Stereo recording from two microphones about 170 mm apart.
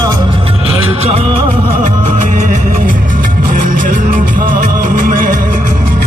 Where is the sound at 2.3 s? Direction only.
50° right (ahead or behind).